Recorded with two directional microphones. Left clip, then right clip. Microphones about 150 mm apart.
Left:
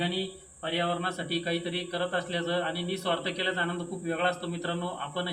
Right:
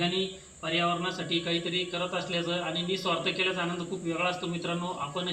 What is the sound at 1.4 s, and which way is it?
A man's voice, 10° left (ahead or behind).